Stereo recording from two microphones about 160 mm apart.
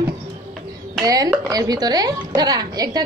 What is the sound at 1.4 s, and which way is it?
A woman's voice, 25° right (ahead or behind).